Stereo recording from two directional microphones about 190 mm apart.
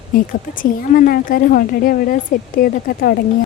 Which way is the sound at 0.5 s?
45° left (ahead or behind).